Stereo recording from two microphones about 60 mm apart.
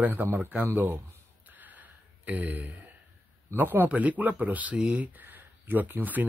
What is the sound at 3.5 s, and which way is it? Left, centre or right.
Speech, right.